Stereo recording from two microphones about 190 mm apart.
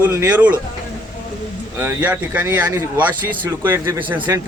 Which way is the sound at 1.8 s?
10° right (ahead or behind).